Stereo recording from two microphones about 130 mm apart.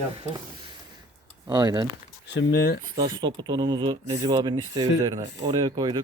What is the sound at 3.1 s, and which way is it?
Speech, 35° right (ahead or behind).